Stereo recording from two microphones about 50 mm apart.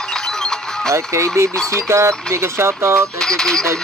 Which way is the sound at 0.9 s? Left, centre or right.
Right.